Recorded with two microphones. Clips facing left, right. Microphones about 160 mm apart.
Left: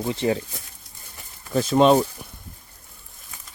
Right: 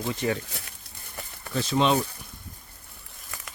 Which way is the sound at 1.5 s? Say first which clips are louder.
Left 7 dB; 45° left (ahead or behind).